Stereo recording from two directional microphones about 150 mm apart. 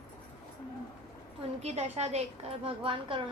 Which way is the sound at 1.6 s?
45° right (ahead or behind).